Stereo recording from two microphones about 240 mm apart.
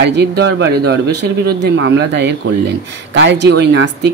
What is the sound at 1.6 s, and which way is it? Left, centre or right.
Speech, right.